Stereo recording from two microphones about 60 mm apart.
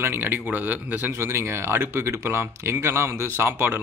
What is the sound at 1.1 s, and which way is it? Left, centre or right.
Speech, right.